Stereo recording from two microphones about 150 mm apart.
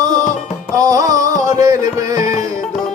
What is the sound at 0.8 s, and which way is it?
Music, 25° right (ahead or behind).